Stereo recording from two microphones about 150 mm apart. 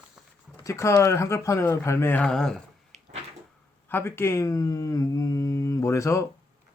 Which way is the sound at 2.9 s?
45° right (ahead or behind).